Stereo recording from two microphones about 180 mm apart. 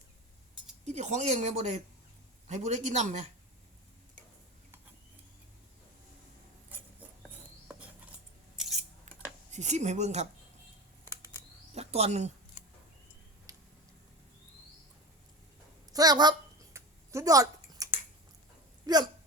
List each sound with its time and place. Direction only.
0.9 s speech: 40° right (ahead or behind)
6.7 s a sound: 10° right (ahead or behind)
8.5 s scissors: centre (ahead or behind)
9.5 s speech: 40° right (ahead or behind)
11.7 s a sound: 35° right (ahead or behind)
13.5 s a sound: 20° right (ahead or behind)
15.9 s speech: 20° right (ahead or behind)
16.7 s scissors: 15° right (ahead or behind)
18.9 s speech: 20° right (ahead or behind)